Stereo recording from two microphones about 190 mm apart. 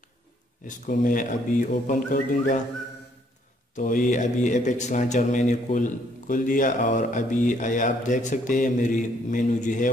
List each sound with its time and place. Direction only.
0.7 s a man's voice: 45° left (ahead or behind)
3.7 s a man's voice: 45° left (ahead or behind)